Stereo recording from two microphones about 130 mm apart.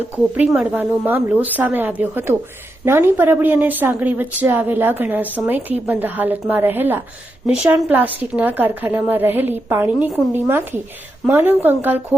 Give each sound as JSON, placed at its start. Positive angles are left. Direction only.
{"t": 0.3, "sound": "a woman's voice", "side_deg": -10}